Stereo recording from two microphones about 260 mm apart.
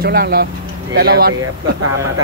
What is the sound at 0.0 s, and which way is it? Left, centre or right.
Speech, right.